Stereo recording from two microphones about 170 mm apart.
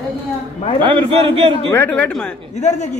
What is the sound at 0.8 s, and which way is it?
Speech, 30° right (ahead or behind).